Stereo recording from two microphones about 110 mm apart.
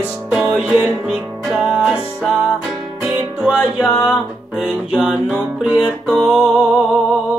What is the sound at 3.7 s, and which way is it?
Music, 15° left (ahead or behind).